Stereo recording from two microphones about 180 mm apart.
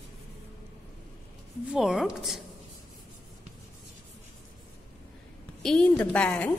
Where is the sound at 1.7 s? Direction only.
Centre (ahead or behind).